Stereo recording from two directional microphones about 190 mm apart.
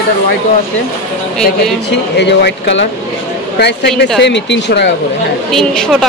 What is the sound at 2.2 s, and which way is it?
Speech, 65° left (ahead or behind).